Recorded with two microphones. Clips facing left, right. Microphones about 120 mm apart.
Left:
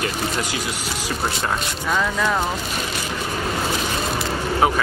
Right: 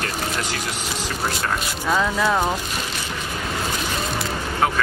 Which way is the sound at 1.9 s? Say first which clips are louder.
Right 1 dB; 10° right (ahead or behind).